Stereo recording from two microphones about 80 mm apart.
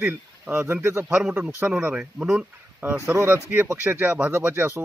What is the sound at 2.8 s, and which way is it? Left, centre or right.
Speech, right.